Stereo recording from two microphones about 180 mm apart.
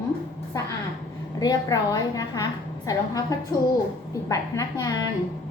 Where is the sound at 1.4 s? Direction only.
20° left (ahead or behind).